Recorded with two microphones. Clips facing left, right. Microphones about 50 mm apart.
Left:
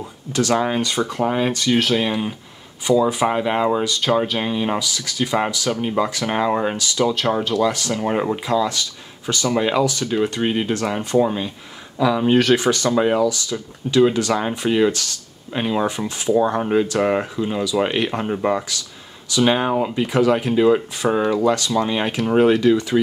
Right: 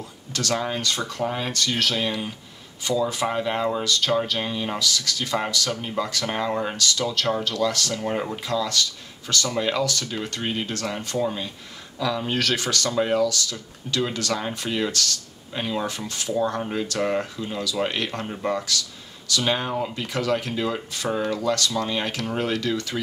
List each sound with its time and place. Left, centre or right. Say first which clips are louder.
0.3 s speech: left 7 dB; centre